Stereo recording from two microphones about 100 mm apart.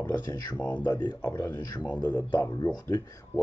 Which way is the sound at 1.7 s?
45° left (ahead or behind).